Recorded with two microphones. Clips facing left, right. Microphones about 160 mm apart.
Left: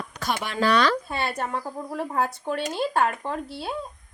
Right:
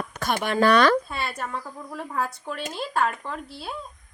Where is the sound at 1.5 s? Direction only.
35° left (ahead or behind).